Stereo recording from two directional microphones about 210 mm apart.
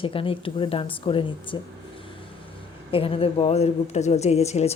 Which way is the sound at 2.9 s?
25° left (ahead or behind).